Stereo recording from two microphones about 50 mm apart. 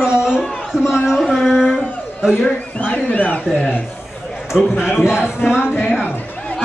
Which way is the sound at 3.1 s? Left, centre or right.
Left.